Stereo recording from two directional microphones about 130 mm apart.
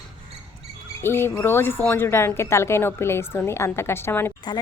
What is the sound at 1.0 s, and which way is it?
Speech, 20° left (ahead or behind).